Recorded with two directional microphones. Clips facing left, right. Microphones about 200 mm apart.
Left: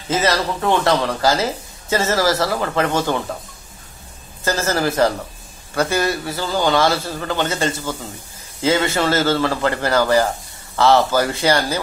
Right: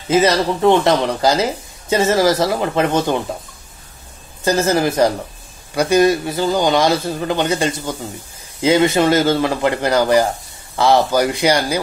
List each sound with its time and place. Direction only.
0.1 s speech: 15° right (ahead or behind)
4.5 s speech: 15° right (ahead or behind)